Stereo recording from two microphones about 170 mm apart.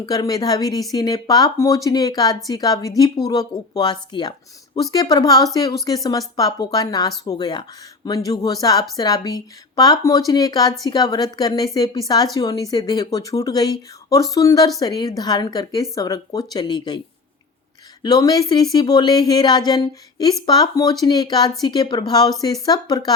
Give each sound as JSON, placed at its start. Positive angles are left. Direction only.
{"t": 0.0, "sound": "speech", "side_deg": 25}
{"t": 18.0, "sound": "speech", "side_deg": 20}